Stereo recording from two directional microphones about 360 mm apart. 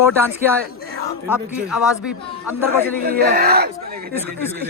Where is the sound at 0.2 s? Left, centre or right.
Centre.